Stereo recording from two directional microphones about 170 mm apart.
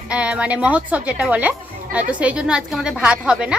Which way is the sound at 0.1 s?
5° right (ahead or behind).